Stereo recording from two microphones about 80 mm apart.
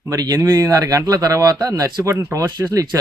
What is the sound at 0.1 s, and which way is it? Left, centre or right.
Speech, right.